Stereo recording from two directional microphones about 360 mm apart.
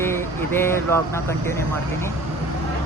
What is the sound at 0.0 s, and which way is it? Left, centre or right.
Vehicle, centre.